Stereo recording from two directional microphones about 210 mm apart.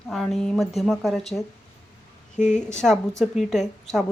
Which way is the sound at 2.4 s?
35° left (ahead or behind).